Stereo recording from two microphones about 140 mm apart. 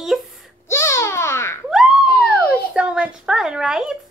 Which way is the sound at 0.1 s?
Centre (ahead or behind).